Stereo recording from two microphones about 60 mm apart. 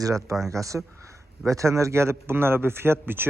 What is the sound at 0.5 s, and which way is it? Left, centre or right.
A man's voice, right.